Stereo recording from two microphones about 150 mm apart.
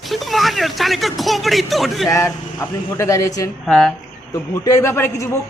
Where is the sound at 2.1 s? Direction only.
20° left (ahead or behind).